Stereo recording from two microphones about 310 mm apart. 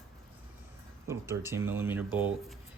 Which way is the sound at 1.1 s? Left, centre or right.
Centre.